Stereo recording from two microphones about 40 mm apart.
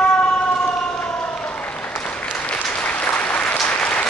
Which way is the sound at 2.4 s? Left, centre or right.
Left.